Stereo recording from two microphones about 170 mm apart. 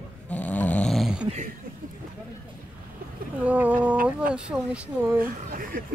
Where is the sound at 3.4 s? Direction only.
10° right (ahead or behind).